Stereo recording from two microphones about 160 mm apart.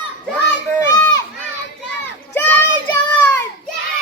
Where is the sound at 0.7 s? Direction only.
20° left (ahead or behind).